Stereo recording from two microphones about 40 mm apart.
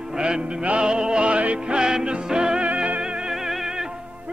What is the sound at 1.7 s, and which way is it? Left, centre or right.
Music, centre.